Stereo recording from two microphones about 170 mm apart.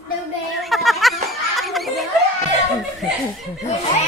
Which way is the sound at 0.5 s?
Centre (ahead or behind).